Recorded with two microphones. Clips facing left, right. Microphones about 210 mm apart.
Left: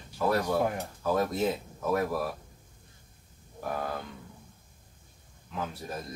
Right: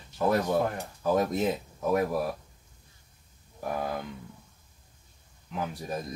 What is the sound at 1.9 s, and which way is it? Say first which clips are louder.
Speech: right 2 dB; 15° right (ahead or behind).